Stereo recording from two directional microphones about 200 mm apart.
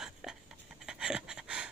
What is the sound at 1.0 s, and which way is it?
Pant, 5° right (ahead or behind).